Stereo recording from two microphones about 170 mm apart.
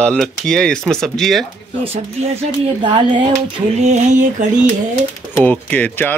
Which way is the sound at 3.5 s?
40° right (ahead or behind).